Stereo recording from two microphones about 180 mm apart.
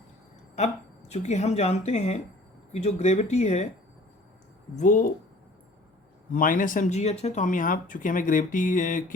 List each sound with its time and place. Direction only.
0.5 s speech: 40° left (ahead or behind)
4.8 s speech: 45° left (ahead or behind)
6.3 s speech: 50° left (ahead or behind)